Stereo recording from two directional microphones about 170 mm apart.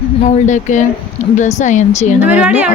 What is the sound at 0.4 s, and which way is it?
Speech, 45° left (ahead or behind).